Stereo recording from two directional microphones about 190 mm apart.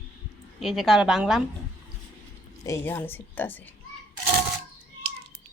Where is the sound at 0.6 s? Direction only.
Centre (ahead or behind).